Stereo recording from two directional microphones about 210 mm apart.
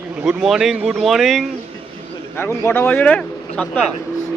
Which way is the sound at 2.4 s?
10° left (ahead or behind).